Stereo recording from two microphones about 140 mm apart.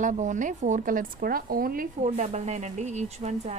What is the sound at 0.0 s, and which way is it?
Speech, 60° right (ahead or behind).